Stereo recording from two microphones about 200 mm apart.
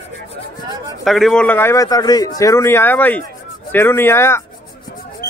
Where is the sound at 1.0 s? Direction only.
Centre (ahead or behind).